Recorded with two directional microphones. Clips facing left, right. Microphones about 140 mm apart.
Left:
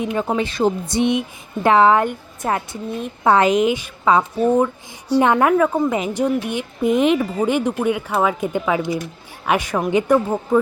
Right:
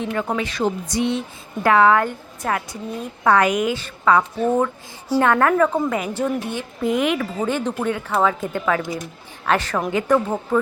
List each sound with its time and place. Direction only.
0.0 s a woman's voice: 15° left (ahead or behind)
5.2 s speech: 15° left (ahead or behind)
5.9 s a woman's voice: 20° left (ahead or behind)